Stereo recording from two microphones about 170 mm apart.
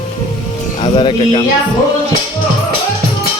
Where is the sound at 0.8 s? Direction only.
30° left (ahead or behind).